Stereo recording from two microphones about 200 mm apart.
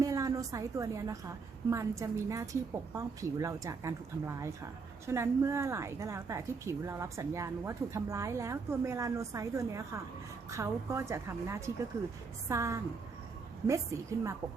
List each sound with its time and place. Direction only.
0.0 s a woman's voice: 15° right (ahead or behind)